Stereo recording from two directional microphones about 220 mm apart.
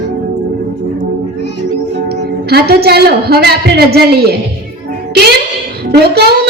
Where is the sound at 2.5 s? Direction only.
45° right (ahead or behind).